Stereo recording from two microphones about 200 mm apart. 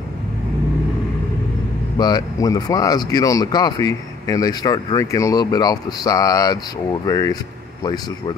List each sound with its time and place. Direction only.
2.0 s speech: 20° left (ahead or behind)